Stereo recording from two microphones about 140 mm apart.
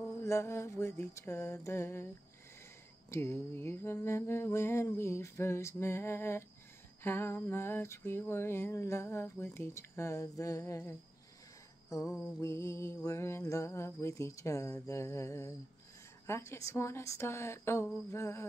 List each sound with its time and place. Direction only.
0.2 s mantra: 20° left (ahead or behind)
3.1 s a sound: 20° left (ahead or behind)
12.4 s mantra: 20° left (ahead or behind)